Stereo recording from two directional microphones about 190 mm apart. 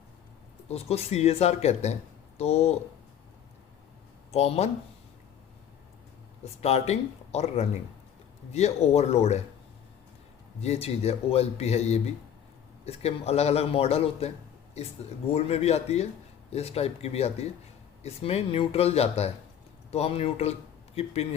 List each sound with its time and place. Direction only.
0.7 s speech: 35° left (ahead or behind)
4.3 s speech: 35° left (ahead or behind)
6.4 s speech: 35° left (ahead or behind)
10.6 s speech: 35° left (ahead or behind)
15.3 s speech: 35° left (ahead or behind)